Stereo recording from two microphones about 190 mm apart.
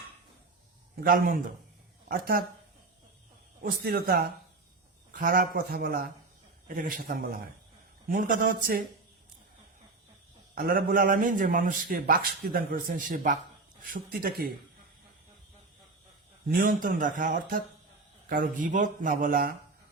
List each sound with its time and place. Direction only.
1.0 s a man's voice: 50° right (ahead or behind)
3.6 s a man's voice: 55° right (ahead or behind)
10.5 s a man's voice: 50° right (ahead or behind)
16.5 s a man's voice: 50° right (ahead or behind)